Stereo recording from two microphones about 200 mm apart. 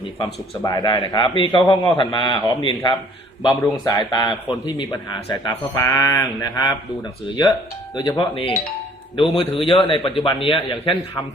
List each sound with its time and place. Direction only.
0.6 s a man's voice: 20° left (ahead or behind)
7.9 s a man's voice: 20° left (ahead or behind)